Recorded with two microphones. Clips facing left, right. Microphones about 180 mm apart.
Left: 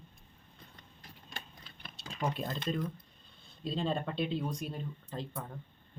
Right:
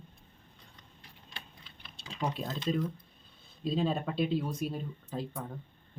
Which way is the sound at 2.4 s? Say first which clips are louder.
Even; 5° right (ahead or behind).